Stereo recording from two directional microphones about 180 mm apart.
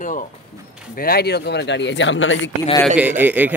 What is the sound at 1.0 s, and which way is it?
Speech, 60° left (ahead or behind).